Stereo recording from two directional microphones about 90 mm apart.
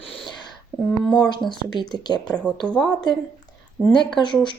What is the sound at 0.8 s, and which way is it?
Speech, 10° left (ahead or behind).